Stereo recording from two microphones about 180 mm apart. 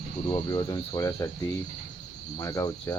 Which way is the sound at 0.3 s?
25° left (ahead or behind).